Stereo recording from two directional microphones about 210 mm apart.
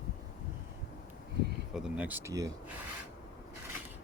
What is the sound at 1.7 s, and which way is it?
Speech, 5° right (ahead or behind).